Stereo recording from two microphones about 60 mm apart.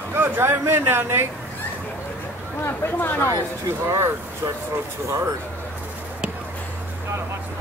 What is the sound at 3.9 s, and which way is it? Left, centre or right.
Speech, right.